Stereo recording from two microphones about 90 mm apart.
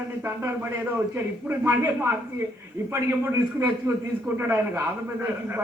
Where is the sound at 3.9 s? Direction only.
35° right (ahead or behind).